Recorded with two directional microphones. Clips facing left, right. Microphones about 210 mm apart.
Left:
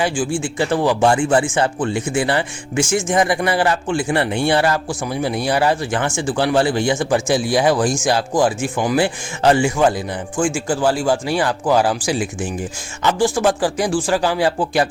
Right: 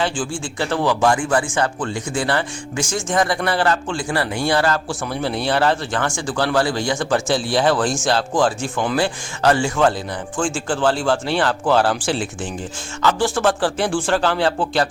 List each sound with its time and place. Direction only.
0.4 s speech: 15° left (ahead or behind)